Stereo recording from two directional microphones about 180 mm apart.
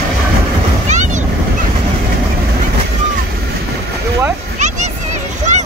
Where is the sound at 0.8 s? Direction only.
40° right (ahead or behind).